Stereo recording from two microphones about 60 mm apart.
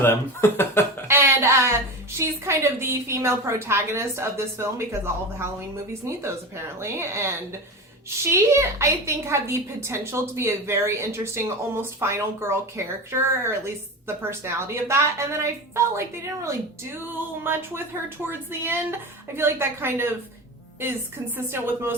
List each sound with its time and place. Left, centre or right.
0.0 s speech: left
1.0 s a sound: right
2.1 s a woman's voice: right
17.4 s a woman's voice: right
21.3 s a woman's voice: right